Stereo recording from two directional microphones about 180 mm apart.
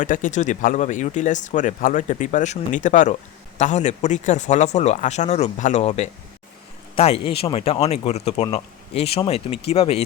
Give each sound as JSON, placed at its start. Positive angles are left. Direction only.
{"t": 0.0, "sound": "speech", "side_deg": 45}